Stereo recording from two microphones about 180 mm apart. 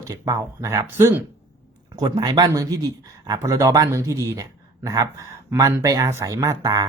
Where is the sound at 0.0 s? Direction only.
20° right (ahead or behind).